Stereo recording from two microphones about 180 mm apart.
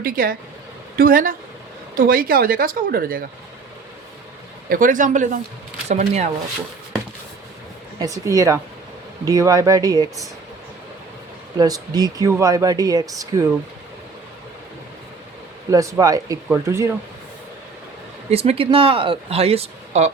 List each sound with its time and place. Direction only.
0.0 s speech: 55° right (ahead or behind)
4.7 s speech: 45° right (ahead or behind)
7.9 s speech: 20° right (ahead or behind)
11.5 s speech: 20° right (ahead or behind)
15.7 s speech: 20° right (ahead or behind)
18.3 s speech: 35° right (ahead or behind)